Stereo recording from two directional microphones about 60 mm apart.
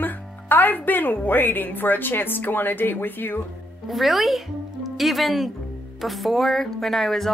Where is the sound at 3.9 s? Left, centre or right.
Centre.